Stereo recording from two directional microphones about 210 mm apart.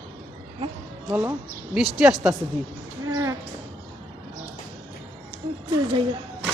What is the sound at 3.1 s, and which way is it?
Music, 15° right (ahead or behind).